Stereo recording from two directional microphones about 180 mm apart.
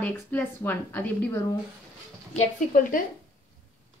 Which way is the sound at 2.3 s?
50° left (ahead or behind).